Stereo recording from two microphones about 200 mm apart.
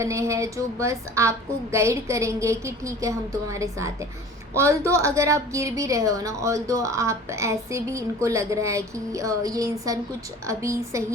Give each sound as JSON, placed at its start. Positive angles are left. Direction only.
{"t": 0.0, "sound": "a woman's voice", "side_deg": -15}